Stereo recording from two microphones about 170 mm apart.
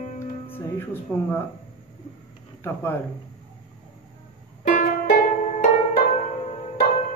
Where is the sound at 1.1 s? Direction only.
15° left (ahead or behind).